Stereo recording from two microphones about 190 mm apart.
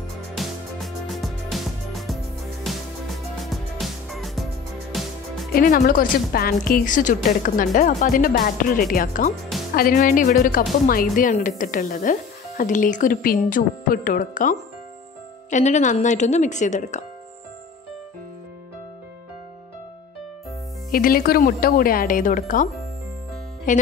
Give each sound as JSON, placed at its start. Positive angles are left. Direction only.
{"t": 0.4, "sound": "music", "side_deg": 0}
{"t": 5.5, "sound": "a woman's voice", "side_deg": 50}
{"t": 20.9, "sound": "a woman's voice", "side_deg": 50}